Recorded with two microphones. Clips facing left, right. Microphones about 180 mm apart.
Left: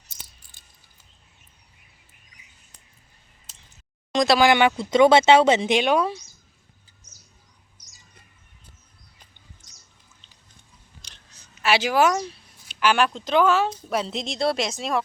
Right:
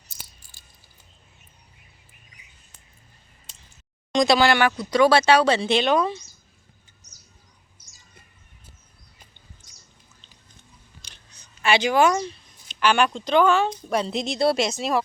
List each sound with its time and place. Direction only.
0.5 s cricket: 20° left (ahead or behind)
4.1 s speech: centre (ahead or behind)
4.4 s speech: 20° left (ahead or behind)
11.0 s a sound: centre (ahead or behind)
11.6 s a woman's voice: 5° left (ahead or behind)